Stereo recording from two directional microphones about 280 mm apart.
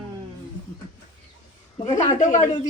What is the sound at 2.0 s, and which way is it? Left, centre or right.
Speech, left.